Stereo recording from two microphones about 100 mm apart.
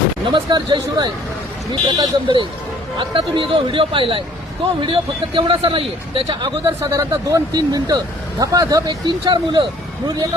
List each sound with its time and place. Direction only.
0.3 s a man's voice: 50° right (ahead or behind)
6.9 s speech: 30° right (ahead or behind); by 9.6 s 50° right (ahead or behind)